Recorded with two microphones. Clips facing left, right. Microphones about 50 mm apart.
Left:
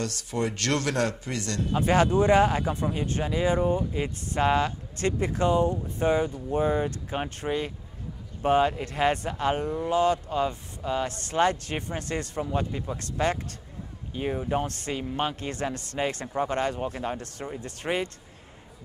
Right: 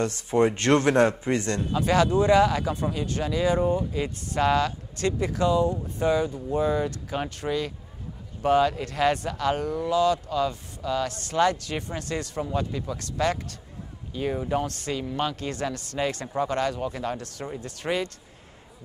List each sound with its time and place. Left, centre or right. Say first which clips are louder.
0.0 s a man's voice: right 7 dB; right
1.7 s speech: even; left